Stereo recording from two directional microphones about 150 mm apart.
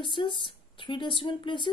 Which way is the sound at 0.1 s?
35° left (ahead or behind).